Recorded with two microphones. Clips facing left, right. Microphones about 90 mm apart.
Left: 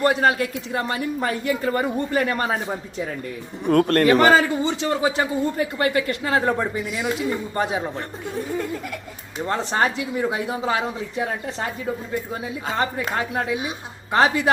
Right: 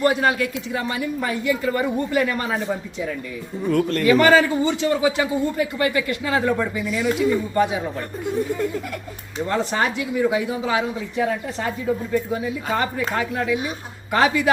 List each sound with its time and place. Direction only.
0.0 s a man's voice: 40° left (ahead or behind)
3.7 s a man's voice: 55° left (ahead or behind)
4.2 s a man's voice: 35° left (ahead or behind)
9.5 s a man's voice: 35° left (ahead or behind)
12.3 s a man's voice: 30° left (ahead or behind)